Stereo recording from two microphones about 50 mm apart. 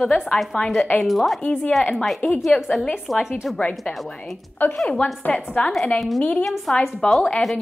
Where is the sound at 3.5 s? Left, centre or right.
Left.